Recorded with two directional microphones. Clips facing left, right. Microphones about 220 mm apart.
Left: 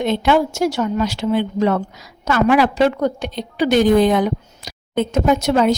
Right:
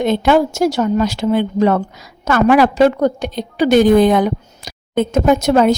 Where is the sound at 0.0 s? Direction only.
45° right (ahead or behind).